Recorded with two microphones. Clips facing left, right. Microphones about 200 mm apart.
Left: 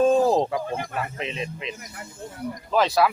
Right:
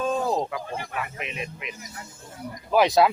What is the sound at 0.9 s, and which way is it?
Speech, 30° left (ahead or behind).